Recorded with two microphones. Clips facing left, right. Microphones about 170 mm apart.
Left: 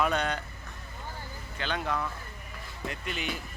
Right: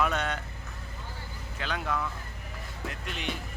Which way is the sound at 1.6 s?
Centre (ahead or behind).